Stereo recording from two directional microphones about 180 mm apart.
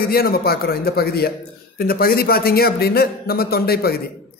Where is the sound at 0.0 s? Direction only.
55° left (ahead or behind).